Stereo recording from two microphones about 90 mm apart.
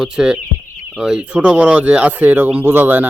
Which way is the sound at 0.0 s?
10° right (ahead or behind).